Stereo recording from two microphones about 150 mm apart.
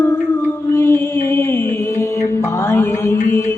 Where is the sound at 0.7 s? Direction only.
15° left (ahead or behind).